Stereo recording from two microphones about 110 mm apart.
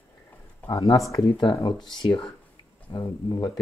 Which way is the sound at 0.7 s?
40° left (ahead or behind).